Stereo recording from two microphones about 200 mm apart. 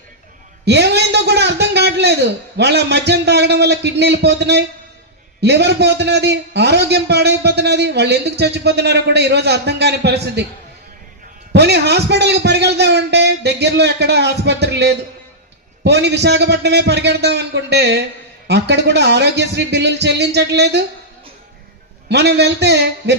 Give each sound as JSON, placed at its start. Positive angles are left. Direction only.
{"t": 0.6, "sound": "a man's voice", "side_deg": -55}
{"t": 11.5, "sound": "a man's voice", "side_deg": -55}
{"t": 22.1, "sound": "a man's voice", "side_deg": -55}